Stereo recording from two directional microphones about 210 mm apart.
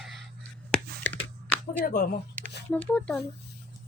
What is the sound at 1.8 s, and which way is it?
Speech, 45° left (ahead or behind).